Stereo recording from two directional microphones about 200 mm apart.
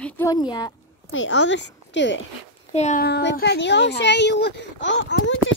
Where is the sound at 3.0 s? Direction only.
55° left (ahead or behind).